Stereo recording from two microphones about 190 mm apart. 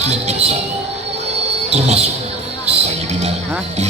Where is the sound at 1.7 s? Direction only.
35° right (ahead or behind).